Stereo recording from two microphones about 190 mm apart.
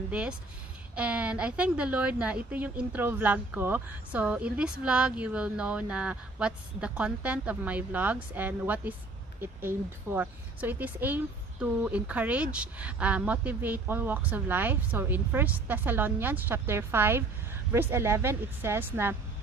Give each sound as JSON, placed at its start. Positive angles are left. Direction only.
{"t": 0.1, "sound": "a woman's voice", "side_deg": -5}